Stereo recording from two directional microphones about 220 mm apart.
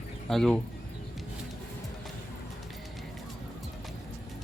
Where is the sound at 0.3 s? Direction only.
Centre (ahead or behind).